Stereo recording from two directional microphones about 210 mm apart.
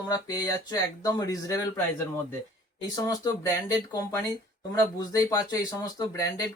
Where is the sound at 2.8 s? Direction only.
20° left (ahead or behind).